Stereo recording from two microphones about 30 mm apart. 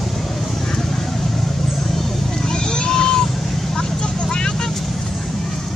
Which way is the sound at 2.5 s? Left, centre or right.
Left.